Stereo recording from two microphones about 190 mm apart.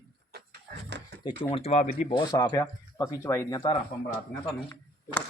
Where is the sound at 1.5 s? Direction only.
35° left (ahead or behind).